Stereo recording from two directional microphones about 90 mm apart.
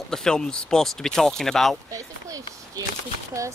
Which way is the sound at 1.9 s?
40° right (ahead or behind).